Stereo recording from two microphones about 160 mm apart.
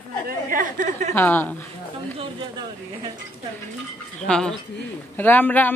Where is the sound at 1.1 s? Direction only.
10° left (ahead or behind).